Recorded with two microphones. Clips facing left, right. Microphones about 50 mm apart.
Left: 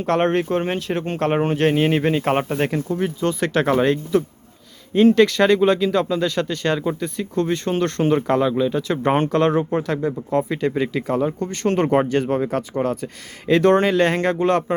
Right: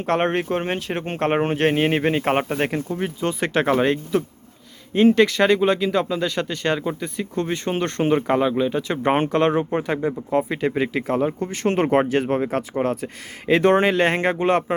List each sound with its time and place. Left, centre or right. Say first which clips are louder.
0.0 s speech: left 2 dB; centre
1.0 s speech: even; right
10.2 s speech: even; centre
10.5 s speech: left 1 dB; centre